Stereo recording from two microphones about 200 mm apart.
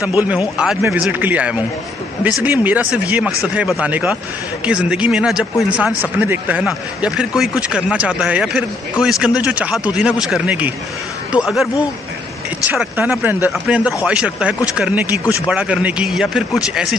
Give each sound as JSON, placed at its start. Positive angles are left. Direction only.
{"t": 0.0, "sound": "a man's voice", "side_deg": -10}